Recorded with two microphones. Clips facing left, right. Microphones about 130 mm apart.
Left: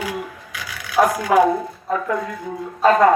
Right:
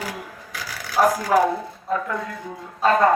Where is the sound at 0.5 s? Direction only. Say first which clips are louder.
Left 3 dB; 35° right (ahead or behind).